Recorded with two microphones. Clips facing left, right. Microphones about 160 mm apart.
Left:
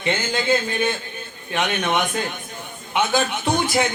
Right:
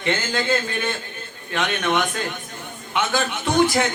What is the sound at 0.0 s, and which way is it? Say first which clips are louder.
A man's voice: even; 15° left (ahead or behind).